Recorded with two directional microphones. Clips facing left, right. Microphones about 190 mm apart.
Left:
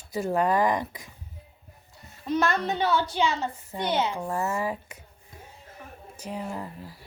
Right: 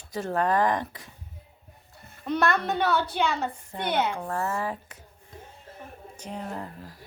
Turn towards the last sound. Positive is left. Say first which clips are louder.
# left 1 dB
turn(degrees=10)  # may be behind; listen again after turning